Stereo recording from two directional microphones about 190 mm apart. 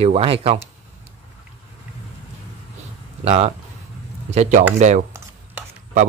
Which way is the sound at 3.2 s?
35° right (ahead or behind).